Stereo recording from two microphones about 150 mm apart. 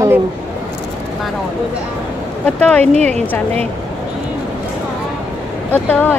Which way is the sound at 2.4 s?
10° left (ahead or behind).